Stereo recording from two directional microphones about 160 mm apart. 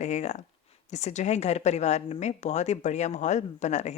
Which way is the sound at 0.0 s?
45° left (ahead or behind).